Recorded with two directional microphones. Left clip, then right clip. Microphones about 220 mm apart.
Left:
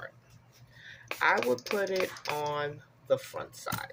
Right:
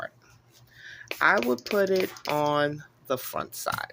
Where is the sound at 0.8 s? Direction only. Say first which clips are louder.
Right 5 dB; 45° right (ahead or behind).